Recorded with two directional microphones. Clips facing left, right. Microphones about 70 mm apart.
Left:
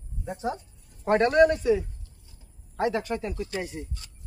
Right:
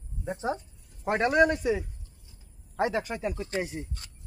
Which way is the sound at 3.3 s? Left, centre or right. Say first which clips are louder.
Even; right.